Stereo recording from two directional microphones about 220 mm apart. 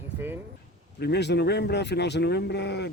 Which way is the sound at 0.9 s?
50° left (ahead or behind).